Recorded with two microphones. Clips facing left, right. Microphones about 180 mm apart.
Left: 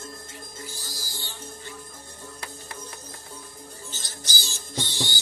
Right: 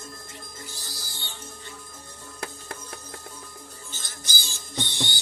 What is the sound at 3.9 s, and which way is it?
Music, 55° right (ahead or behind).